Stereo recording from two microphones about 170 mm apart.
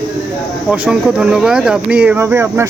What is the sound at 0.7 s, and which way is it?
Speech, 5° right (ahead or behind).